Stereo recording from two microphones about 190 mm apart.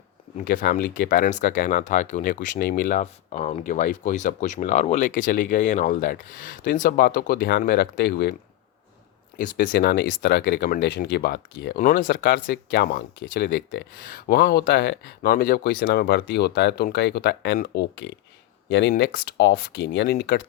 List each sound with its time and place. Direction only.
0.4 s speech: 50° left (ahead or behind)
3.0 s speech: 35° left (ahead or behind); by 8.4 s 60° left (ahead or behind)
9.4 s speech: 55° left (ahead or behind)
11.8 s speech: 45° left (ahead or behind); by 20.1 s 65° left (ahead or behind)